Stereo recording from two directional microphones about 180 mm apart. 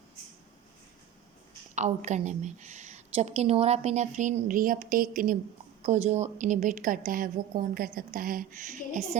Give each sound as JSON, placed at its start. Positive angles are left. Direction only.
{"t": 1.7, "sound": "a woman's voice", "side_deg": -40}
{"t": 5.8, "sound": "a woman's voice", "side_deg": -40}